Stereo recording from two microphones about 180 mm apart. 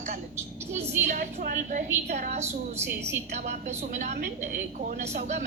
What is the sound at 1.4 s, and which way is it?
Speech, 45° right (ahead or behind).